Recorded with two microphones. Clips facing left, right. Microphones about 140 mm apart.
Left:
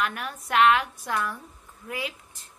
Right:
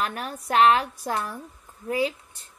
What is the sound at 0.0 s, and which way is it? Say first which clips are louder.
A woman's voice: right 1 dB; 35° right (ahead or behind).